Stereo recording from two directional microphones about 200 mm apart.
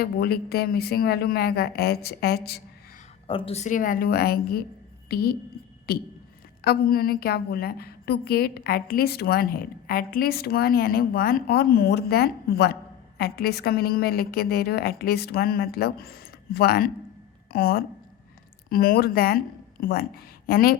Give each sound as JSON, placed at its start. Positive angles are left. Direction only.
{"t": 0.0, "sound": "a woman's voice", "side_deg": 50}
{"t": 3.2, "sound": "a woman's voice", "side_deg": 25}